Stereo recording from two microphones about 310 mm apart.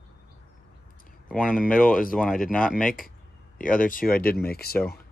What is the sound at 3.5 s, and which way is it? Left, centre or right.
Speech, left.